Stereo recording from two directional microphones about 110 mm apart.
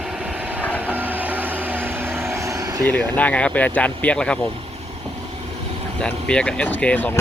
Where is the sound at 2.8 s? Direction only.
15° left (ahead or behind).